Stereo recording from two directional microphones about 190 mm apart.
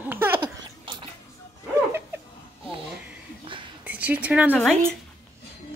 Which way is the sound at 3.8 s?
10° right (ahead or behind).